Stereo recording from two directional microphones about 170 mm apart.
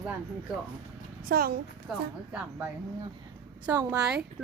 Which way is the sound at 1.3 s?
65° right (ahead or behind).